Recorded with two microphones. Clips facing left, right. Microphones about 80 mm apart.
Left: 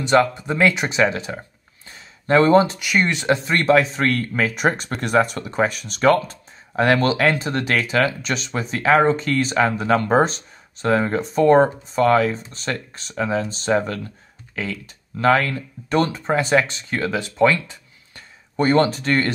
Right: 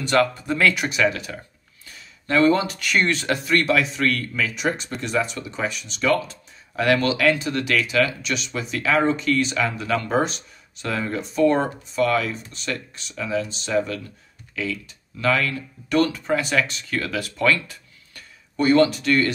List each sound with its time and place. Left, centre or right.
0.0 s speech: left
1.9 s a sound: left
2.8 s speech: centre
18.6 s speech: left